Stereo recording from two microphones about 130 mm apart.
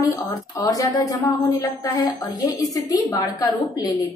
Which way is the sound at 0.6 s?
25° left (ahead or behind).